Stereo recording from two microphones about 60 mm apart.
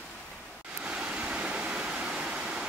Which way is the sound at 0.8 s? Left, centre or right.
Centre.